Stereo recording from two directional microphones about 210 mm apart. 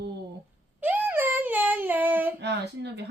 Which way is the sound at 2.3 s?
55° right (ahead or behind).